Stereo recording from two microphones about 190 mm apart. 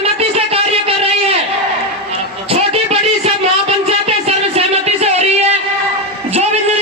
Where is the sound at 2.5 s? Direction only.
30° right (ahead or behind).